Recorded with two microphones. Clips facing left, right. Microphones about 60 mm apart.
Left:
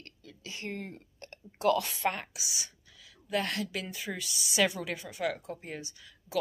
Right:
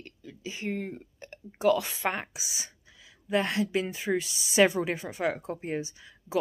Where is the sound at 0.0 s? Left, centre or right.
Centre.